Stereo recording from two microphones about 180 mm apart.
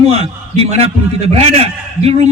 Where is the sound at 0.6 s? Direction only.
35° right (ahead or behind).